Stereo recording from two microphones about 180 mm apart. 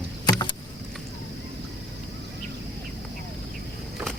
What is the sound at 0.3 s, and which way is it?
Rowboat, 25° left (ahead or behind).